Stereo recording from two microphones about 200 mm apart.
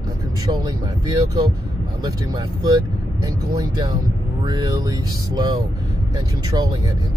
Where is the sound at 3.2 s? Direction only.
15° right (ahead or behind).